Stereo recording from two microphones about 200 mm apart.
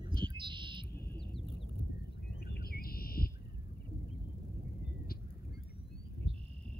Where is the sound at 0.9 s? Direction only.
55° left (ahead or behind).